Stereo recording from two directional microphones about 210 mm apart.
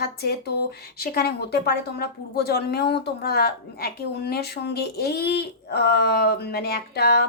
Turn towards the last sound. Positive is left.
turn(degrees=50)  # may be behind; listen again after turning